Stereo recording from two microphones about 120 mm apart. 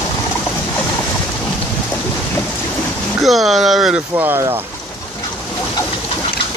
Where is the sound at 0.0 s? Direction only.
20° left (ahead or behind).